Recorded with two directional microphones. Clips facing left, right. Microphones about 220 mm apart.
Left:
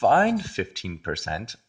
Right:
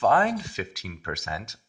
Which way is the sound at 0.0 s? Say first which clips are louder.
Left 3 dB; 30° left (ahead or behind).